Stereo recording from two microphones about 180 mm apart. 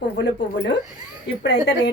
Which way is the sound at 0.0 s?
70° left (ahead or behind).